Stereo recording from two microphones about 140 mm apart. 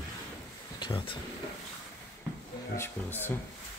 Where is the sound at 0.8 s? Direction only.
35° left (ahead or behind).